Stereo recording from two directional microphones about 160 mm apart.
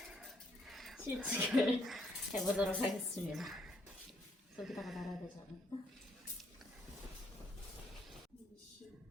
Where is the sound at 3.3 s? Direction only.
Centre (ahead or behind).